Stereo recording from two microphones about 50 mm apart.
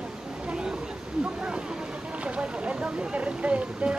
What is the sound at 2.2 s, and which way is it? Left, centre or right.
Boat, right.